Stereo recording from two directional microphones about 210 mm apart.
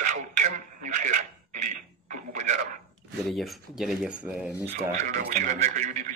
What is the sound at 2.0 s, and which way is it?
Radio, 35° right (ahead or behind).